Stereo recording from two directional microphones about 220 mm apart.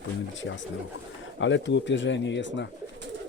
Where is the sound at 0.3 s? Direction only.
55° left (ahead or behind).